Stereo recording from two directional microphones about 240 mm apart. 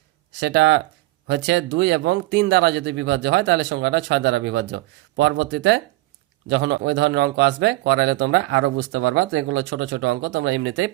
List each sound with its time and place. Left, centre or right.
0.3 s speech: right